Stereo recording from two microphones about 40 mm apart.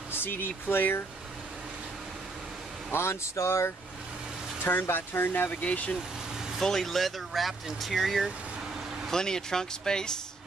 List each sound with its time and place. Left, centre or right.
0.1 s speech: left
2.9 s speech: left
4.6 s speech: left
5.5 s speech: left
6.6 s speech: centre
9.1 s speech: centre